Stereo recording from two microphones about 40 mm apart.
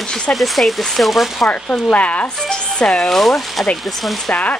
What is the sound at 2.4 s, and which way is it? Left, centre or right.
Speech, left.